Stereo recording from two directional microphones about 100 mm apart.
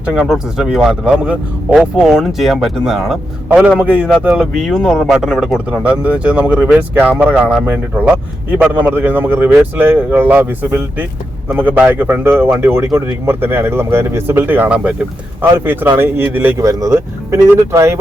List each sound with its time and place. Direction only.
0.0 s speech: 10° right (ahead or behind)
2.0 s speech: centre (ahead or behind)
4.5 s speech: centre (ahead or behind)
5.8 s speech: 15° right (ahead or behind)
16.6 s speech: 30° right (ahead or behind)